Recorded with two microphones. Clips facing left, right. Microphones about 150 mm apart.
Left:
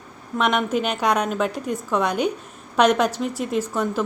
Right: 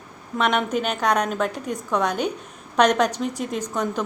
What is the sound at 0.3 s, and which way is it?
A woman's voice, 5° left (ahead or behind).